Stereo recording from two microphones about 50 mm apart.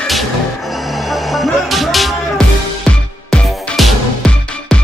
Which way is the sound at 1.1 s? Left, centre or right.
Centre.